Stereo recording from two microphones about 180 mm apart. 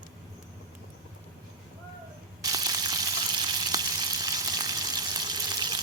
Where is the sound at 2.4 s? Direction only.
20° right (ahead or behind).